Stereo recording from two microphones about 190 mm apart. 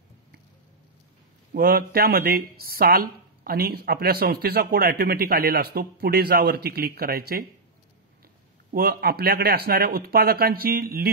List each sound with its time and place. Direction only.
1.5 s speech: 50° right (ahead or behind)
8.7 s speech: 55° right (ahead or behind)